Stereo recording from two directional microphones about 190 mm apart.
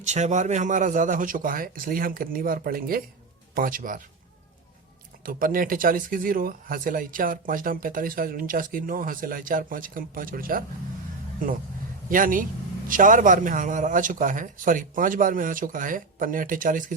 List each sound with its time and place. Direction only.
0.0 s speech: 35° right (ahead or behind)
5.2 s speech: 50° right (ahead or behind)
12.0 s speech: 45° right (ahead or behind)